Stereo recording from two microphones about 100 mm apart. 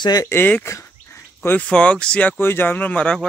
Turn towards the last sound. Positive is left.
turn(degrees=10)  # may be behind; listen again after turning